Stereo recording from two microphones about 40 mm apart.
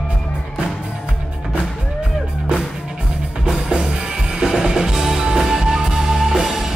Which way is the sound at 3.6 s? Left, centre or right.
Centre.